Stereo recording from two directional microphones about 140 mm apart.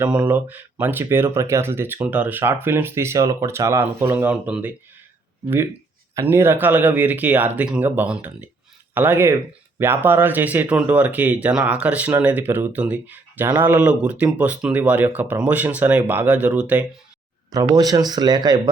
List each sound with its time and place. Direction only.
0.3 s speech: 15° right (ahead or behind)
6.1 s speech: 15° right (ahead or behind)
17.5 s speech: 25° right (ahead or behind)